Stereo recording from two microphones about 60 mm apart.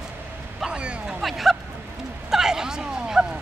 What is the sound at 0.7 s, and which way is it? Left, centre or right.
Speech, centre.